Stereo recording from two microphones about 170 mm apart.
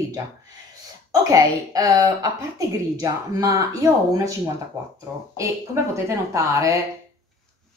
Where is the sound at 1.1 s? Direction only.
20° right (ahead or behind).